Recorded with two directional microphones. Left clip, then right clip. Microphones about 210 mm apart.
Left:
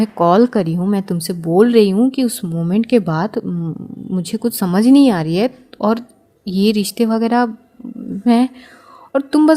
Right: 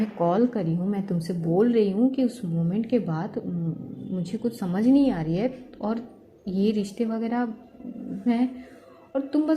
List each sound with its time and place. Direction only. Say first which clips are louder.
0.2 s speech: left 11 dB; 35° left (ahead or behind)
6.4 s a woman's voice: left 9 dB; 80° left
7.0 s speech: left 14 dB; 40° left (ahead or behind)